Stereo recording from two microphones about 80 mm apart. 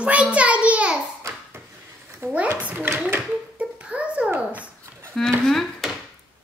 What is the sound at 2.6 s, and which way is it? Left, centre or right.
Speech, centre.